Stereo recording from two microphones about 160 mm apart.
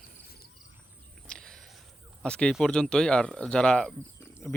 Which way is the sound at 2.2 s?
5° left (ahead or behind).